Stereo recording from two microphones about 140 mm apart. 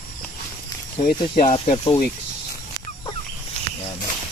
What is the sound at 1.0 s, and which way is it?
Speech, 90° left.